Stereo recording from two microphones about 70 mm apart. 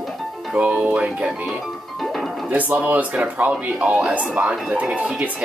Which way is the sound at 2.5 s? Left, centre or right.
Right.